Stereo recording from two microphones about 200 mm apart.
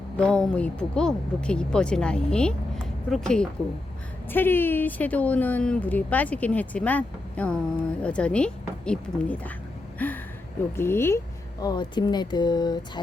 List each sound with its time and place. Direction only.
0.2 s a woman's voice: 5° left (ahead or behind); by 13.0 s 20° left (ahead or behind)